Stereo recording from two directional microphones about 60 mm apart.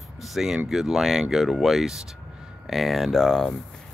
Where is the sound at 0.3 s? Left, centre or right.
Centre.